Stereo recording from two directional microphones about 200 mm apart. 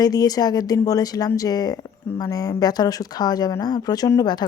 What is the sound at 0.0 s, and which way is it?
A woman's voice, 20° left (ahead or behind).